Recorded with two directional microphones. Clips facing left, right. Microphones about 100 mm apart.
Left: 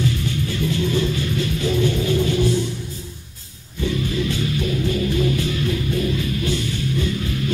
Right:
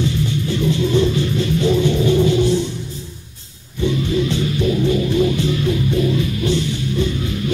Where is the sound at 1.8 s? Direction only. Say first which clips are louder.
Right 4 dB; 20° right (ahead or behind).